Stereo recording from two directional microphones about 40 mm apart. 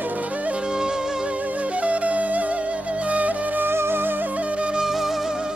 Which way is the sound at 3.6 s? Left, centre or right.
Right.